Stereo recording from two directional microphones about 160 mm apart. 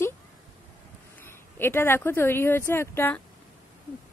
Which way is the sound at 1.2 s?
15° left (ahead or behind).